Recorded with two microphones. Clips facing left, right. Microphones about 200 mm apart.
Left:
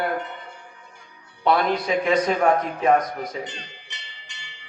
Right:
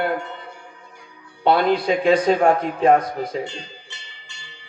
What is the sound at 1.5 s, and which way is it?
Speech, 30° right (ahead or behind).